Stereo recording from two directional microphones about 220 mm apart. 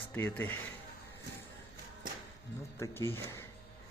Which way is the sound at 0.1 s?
5° left (ahead or behind).